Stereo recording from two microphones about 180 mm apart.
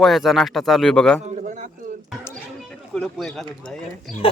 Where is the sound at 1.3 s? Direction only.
45° right (ahead or behind).